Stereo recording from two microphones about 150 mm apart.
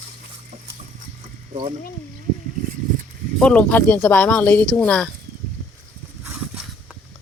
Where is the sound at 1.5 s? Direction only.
35° right (ahead or behind).